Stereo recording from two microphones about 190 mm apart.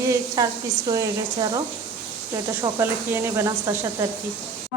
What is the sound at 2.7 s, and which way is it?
Speech, 15° right (ahead or behind).